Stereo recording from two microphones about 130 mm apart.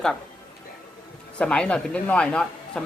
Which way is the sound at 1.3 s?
5° left (ahead or behind).